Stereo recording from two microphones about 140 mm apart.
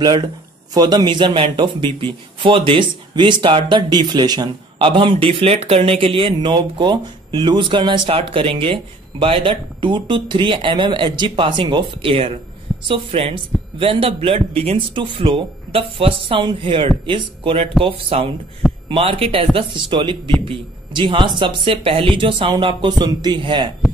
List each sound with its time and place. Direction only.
0.0 s a man's voice: 30° right (ahead or behind)